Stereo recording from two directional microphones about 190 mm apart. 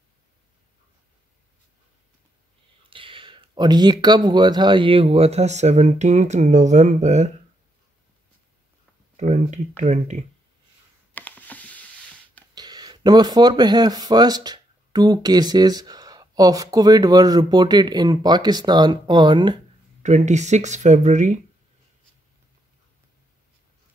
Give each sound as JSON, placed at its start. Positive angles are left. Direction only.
{"t": 2.9, "sound": "speech", "side_deg": -25}
{"t": 9.1, "sound": "speech", "side_deg": -40}
{"t": 11.1, "sound": "a sound", "side_deg": 10}
{"t": 12.5, "sound": "speech", "side_deg": -20}
{"t": 20.0, "sound": "speech", "side_deg": -40}